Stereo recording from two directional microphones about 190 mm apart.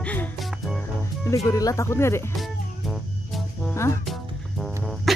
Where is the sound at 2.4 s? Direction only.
Centre (ahead or behind).